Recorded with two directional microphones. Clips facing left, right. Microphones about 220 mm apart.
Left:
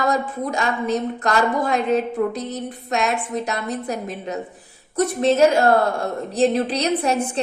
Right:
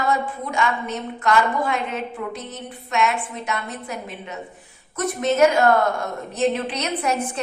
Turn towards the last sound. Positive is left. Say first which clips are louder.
# left 3 dB
turn(degrees=30)  # may be behind; listen again after turning